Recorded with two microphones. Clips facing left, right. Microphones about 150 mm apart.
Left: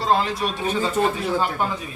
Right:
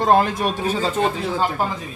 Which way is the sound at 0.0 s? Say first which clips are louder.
Right 4 dB; 50° right (ahead or behind).